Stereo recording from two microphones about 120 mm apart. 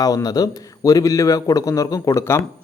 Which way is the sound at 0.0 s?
30° left (ahead or behind).